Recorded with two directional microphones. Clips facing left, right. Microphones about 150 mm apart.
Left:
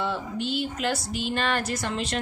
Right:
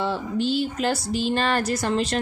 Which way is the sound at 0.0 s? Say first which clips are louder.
Right 4 dB; 35° right (ahead or behind).